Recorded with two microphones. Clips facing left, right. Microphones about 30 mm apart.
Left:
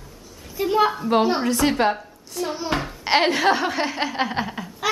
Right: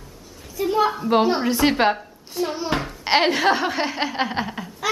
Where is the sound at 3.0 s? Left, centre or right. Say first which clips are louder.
Even; centre.